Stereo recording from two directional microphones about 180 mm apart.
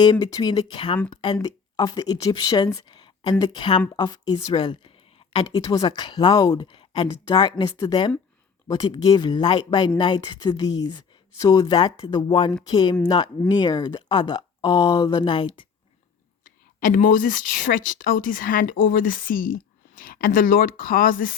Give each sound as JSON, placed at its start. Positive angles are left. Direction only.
{"t": 0.0, "sound": "speech", "side_deg": 25}
{"t": 16.8, "sound": "speech", "side_deg": 45}